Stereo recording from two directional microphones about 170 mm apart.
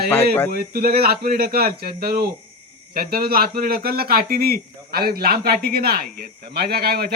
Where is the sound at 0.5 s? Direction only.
65° right (ahead or behind).